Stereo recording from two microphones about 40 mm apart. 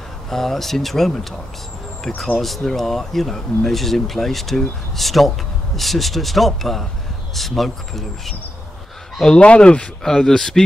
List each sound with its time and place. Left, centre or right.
0.3 s speech: centre
2.3 s speech: centre
9.4 s speech: left
10.0 s speech: centre